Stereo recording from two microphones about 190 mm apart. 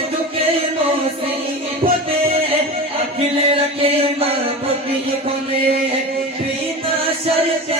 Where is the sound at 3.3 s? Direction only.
30° right (ahead or behind).